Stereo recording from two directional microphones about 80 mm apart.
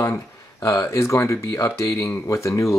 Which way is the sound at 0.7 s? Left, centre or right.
Left.